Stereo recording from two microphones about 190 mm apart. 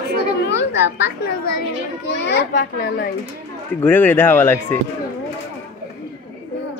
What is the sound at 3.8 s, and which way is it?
Speech, 10° left (ahead or behind).